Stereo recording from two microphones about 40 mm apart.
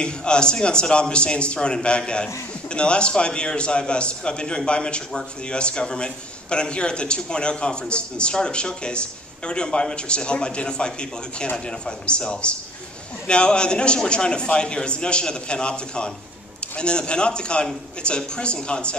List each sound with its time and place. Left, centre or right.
0.0 s a man's voice: left